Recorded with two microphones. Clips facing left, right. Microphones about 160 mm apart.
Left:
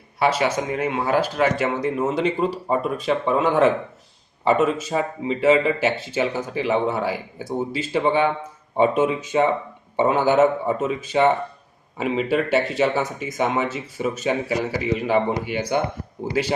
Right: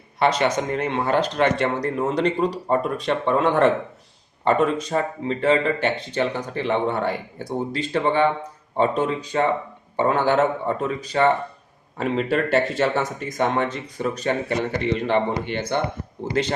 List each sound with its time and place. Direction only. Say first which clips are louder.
0.2 s speech: even; 5° left (ahead or behind)
10.2 s speech: left 4 dB; 5° left (ahead or behind)